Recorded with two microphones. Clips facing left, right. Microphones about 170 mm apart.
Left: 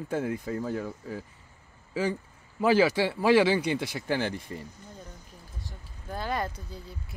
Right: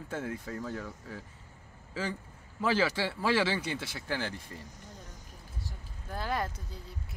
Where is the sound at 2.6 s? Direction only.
15° left (ahead or behind).